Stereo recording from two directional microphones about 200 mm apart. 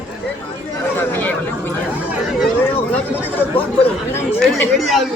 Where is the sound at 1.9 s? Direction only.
5° right (ahead or behind).